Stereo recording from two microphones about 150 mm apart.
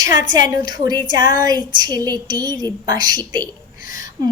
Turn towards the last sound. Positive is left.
turn(degrees=-25)  # may be behind; listen again after turning